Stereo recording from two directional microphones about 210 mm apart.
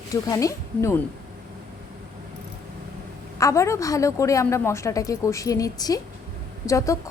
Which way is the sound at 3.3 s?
15° left (ahead or behind).